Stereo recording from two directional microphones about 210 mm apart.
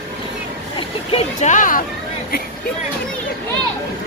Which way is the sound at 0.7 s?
25° left (ahead or behind).